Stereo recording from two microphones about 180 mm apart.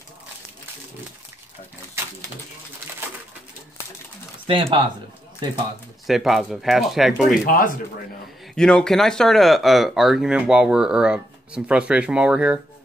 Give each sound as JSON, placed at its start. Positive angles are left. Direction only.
{"t": 4.5, "sound": "speech", "side_deg": -30}
{"t": 6.0, "sound": "speech", "side_deg": 0}
{"t": 7.4, "sound": "speech", "side_deg": 50}
{"t": 8.5, "sound": "speech", "side_deg": 5}